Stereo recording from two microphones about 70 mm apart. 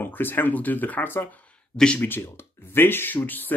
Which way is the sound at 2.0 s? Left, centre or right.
Left.